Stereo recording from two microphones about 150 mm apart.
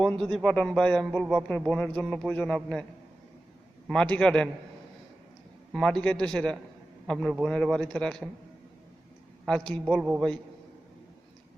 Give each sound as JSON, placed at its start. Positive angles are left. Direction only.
{"t": 0.0, "sound": "speech", "side_deg": 5}
{"t": 3.8, "sound": "a man's voice", "side_deg": 5}
{"t": 5.7, "sound": "speech", "side_deg": 5}
{"t": 9.5, "sound": "speech", "side_deg": 5}
{"t": 10.0, "sound": "a man's voice", "side_deg": -10}